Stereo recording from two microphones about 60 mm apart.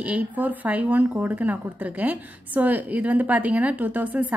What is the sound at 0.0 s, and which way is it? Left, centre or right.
A woman's voice, right.